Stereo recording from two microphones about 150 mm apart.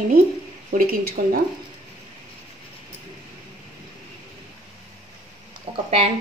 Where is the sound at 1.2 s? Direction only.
85° right.